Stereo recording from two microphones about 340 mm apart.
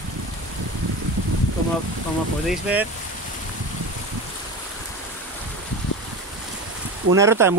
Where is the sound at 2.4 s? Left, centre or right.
Centre.